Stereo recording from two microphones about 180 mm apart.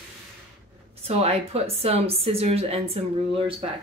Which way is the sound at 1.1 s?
35° right (ahead or behind).